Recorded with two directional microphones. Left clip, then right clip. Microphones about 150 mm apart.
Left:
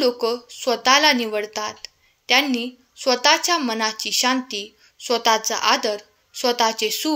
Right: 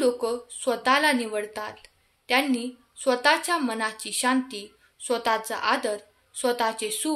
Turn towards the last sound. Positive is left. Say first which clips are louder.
# left 6 dB
turn(degrees=30)  # may be behind; listen again after turning